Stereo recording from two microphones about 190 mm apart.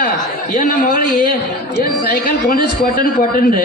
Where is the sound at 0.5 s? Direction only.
45° left (ahead or behind).